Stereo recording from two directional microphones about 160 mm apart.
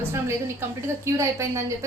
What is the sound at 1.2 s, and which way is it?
Speech, 20° right (ahead or behind).